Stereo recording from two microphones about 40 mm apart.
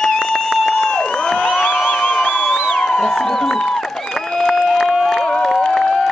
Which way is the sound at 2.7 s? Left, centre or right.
Centre.